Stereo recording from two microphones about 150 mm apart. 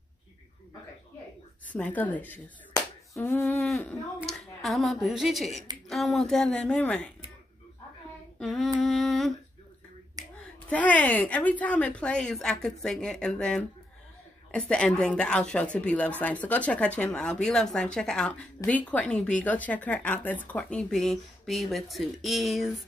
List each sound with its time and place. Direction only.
1.7 s a woman's voice: 10° left (ahead or behind)
8.4 s a sound: centre (ahead or behind)
10.4 s a woman's voice: 10° left (ahead or behind)